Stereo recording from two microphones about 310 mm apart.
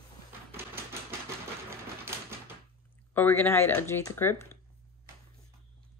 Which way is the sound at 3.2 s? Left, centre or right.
Centre.